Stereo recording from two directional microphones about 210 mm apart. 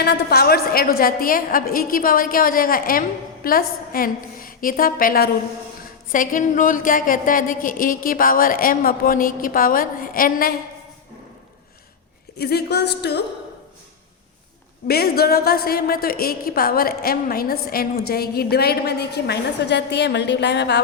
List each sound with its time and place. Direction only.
0.0 s a woman's voice: 50° left (ahead or behind)
12.4 s a woman's voice: 50° left (ahead or behind)
14.8 s a woman's voice: 45° left (ahead or behind)